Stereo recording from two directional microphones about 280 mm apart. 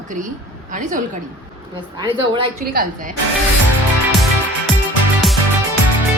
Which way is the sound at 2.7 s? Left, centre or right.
Right.